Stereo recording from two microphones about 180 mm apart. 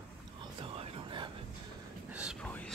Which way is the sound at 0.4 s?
30° right (ahead or behind).